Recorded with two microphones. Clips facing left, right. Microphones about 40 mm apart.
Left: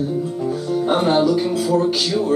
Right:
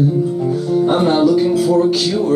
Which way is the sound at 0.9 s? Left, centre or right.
Centre.